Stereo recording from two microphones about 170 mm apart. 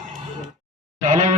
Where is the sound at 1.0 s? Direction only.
45° right (ahead or behind).